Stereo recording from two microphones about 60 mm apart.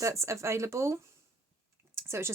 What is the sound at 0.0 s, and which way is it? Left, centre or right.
Speech, right.